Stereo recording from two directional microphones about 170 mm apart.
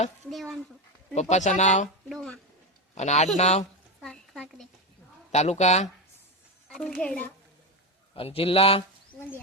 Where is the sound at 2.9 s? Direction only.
40° left (ahead or behind).